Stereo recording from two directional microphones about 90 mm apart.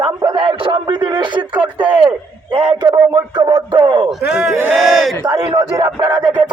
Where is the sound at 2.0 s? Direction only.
65° right (ahead or behind).